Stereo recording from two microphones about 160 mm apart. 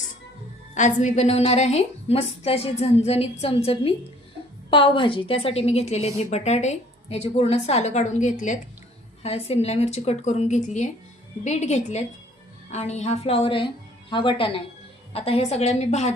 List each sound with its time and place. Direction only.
0.7 s a woman's voice: 50° left (ahead or behind)